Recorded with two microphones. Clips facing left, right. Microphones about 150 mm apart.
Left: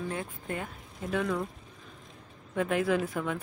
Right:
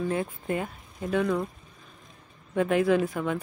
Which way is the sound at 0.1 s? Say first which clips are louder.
Right 7 dB; 5° right (ahead or behind).